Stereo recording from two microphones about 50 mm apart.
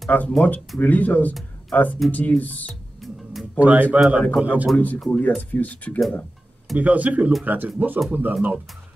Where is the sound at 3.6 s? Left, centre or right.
Right.